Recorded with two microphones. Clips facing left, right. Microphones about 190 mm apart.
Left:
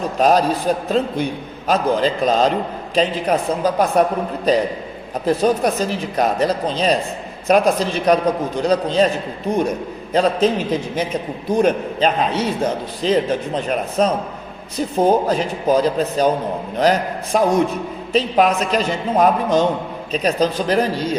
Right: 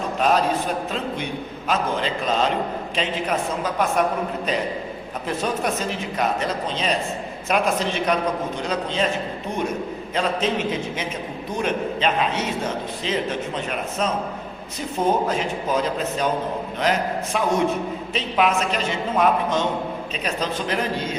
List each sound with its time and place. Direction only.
0.2 s a man's voice: 35° left (ahead or behind)
10.2 s a man's voice: 35° left (ahead or behind)